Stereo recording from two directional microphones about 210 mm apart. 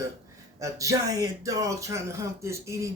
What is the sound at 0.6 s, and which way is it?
Speech, 15° right (ahead or behind).